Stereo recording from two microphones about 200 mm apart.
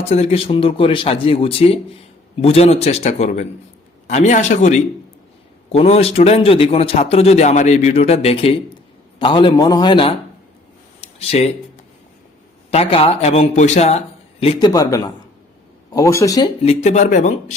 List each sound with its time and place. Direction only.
0.1 s a man's voice: 30° left (ahead or behind)
12.7 s a man's voice: 30° left (ahead or behind)
16.6 s a man's voice: 35° left (ahead or behind)